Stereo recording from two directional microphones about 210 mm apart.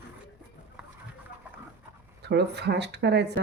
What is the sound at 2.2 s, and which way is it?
Speech, 55° right (ahead or behind).